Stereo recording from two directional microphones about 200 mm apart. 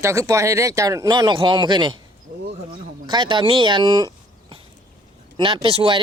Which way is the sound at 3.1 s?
25° right (ahead or behind).